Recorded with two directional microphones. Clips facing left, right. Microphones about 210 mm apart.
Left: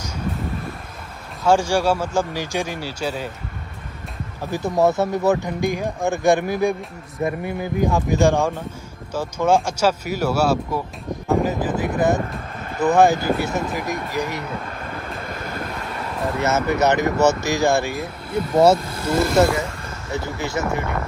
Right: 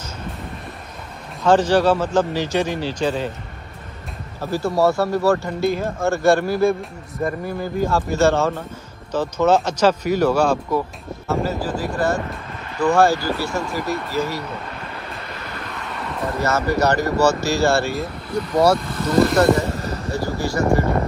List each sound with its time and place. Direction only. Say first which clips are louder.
1.4 s speech: right 3 dB; 10° left (ahead or behind)
4.5 s speech: right 1 dB; 20° left (ahead or behind)
11.2 s speech: left 2 dB; 20° left (ahead or behind)
15.2 s vehicle: left 4 dB; 45° left (ahead or behind)
16.4 s speech: even; 20° left (ahead or behind)
19.1 s speech: right 2 dB; centre (ahead or behind)
19.7 s a sound: right 8 dB; 35° right (ahead or behind)
20.1 s speech: right 2 dB; 20° left (ahead or behind)
20.6 s speech: right 6 dB; 35° right (ahead or behind)